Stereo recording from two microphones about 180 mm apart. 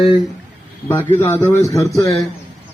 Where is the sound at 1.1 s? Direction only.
10° left (ahead or behind).